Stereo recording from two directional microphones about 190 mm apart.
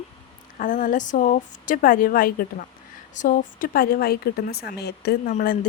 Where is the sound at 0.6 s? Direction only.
45° left (ahead or behind).